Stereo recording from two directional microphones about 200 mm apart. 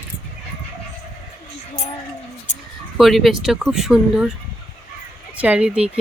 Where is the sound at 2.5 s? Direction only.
35° left (ahead or behind).